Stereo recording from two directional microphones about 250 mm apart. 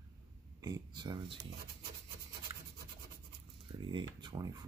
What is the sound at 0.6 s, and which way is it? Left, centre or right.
Speech, centre.